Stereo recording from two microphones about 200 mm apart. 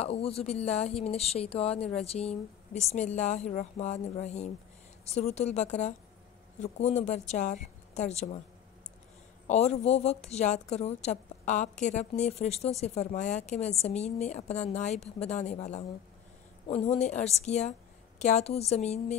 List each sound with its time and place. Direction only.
0.0 s speech: 30° left (ahead or behind)
9.5 s speech: 35° left (ahead or behind)